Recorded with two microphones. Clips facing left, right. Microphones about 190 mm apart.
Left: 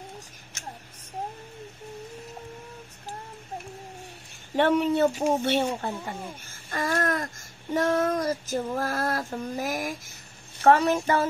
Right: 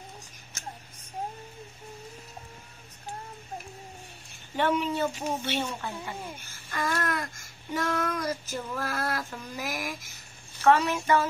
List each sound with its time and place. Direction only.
4.6 s speech: 55° left (ahead or behind)
6.7 s babbling: 40° left (ahead or behind)
10.6 s speech: 40° left (ahead or behind)